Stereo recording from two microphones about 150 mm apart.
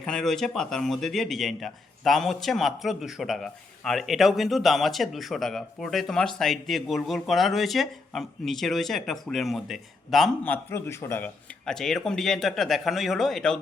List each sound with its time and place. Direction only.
0.0 s speech: 5° left (ahead or behind)
10.4 s speech: 15° left (ahead or behind)
11.6 s speech: 5° left (ahead or behind)